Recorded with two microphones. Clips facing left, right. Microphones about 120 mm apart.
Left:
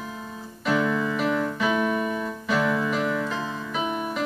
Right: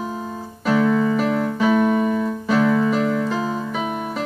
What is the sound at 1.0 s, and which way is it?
Music, 40° right (ahead or behind).